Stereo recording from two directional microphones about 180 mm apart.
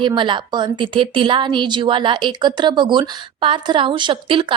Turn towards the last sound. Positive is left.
turn(degrees=-30)  # may be behind; listen again after turning